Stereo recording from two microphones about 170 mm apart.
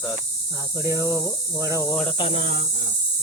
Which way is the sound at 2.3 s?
60° left (ahead or behind).